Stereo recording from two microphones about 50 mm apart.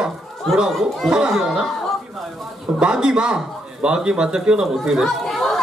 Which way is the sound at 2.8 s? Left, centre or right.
Centre.